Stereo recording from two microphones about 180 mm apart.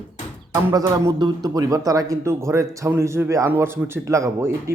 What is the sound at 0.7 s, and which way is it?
A man's voice, 20° right (ahead or behind).